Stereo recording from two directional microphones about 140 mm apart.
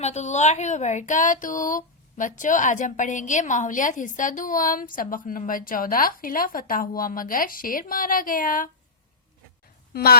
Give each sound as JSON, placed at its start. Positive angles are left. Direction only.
{"t": 0.0, "sound": "speech", "side_deg": 55}
{"t": 9.9, "sound": "a woman's voice", "side_deg": 90}